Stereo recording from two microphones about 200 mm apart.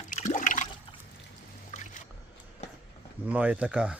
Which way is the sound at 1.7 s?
35° left (ahead or behind).